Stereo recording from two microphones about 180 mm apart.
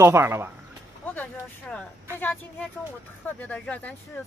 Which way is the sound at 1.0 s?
10° left (ahead or behind).